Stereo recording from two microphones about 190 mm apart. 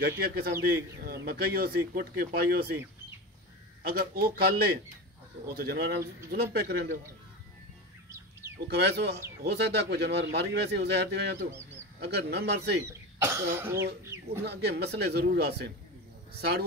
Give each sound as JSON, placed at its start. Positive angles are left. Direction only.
{"t": 0.0, "sound": "speech", "side_deg": -55}
{"t": 3.8, "sound": "speech", "side_deg": -50}
{"t": 8.5, "sound": "speech", "side_deg": -60}
{"t": 13.2, "sound": "speech", "side_deg": -15}
{"t": 14.0, "sound": "chicken", "side_deg": -15}
{"t": 14.4, "sound": "speech", "side_deg": -60}